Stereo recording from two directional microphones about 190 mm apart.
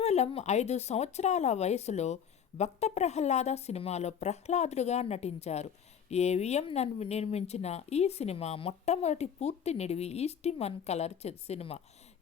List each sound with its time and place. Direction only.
0.0 s a woman's voice: 35° left (ahead or behind)